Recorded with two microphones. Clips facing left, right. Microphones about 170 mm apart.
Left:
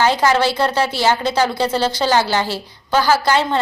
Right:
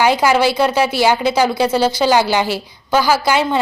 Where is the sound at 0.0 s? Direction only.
10° right (ahead or behind).